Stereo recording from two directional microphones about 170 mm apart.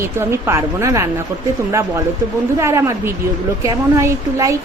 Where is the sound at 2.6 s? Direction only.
15° right (ahead or behind).